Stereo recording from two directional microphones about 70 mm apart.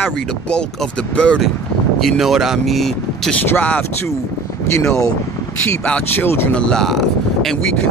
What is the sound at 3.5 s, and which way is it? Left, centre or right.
Speech, left.